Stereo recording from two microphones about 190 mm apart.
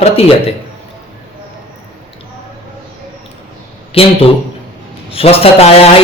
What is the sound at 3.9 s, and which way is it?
Speech, 30° left (ahead or behind).